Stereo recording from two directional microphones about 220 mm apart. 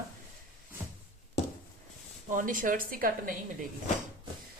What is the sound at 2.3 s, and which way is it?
Speech, 35° right (ahead or behind).